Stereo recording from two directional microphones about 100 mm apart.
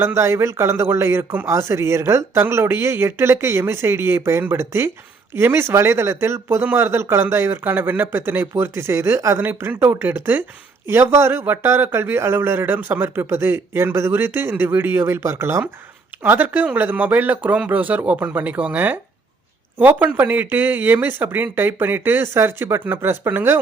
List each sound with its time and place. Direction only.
0.0 s speech: 25° right (ahead or behind)